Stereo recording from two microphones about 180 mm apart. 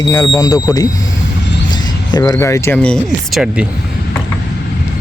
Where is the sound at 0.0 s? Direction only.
20° left (ahead or behind).